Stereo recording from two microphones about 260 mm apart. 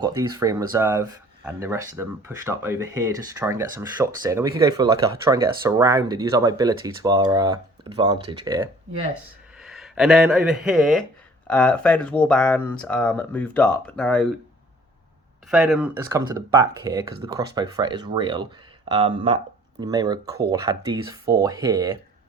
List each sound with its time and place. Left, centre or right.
0.0 s speech: centre
9.6 s speech: centre
15.4 s speech: centre
16.0 s speech: centre